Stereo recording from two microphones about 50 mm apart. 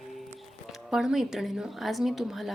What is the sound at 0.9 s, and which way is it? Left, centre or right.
A woman's voice, centre.